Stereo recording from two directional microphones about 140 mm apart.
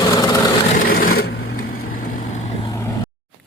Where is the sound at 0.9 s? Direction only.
90° left; by 2.4 s 70° left (ahead or behind).